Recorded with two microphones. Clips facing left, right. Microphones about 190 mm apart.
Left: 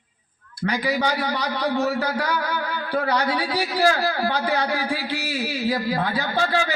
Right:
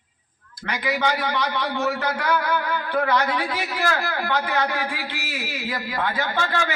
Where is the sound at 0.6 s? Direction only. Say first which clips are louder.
Left 1 dB; 35° left (ahead or behind).